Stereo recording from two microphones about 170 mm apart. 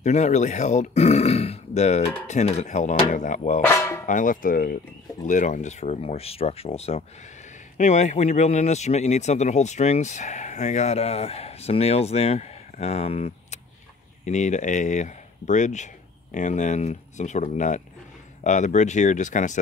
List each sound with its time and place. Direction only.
0.0 s speech: 45° left (ahead or behind)
3.6 s a sound: 15° left (ahead or behind)
4.0 s speech: 50° left (ahead or behind)